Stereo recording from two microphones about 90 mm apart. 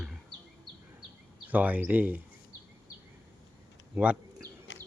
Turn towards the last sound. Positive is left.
turn(degrees=-15)  # may be behind; listen again after turning